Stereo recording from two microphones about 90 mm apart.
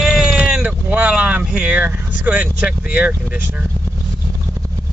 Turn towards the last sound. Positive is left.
turn(degrees=-15)  # may be behind; listen again after turning